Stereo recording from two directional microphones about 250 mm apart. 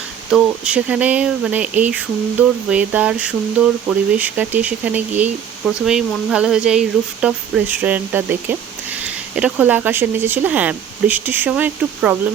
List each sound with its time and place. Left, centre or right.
0.3 s speech: centre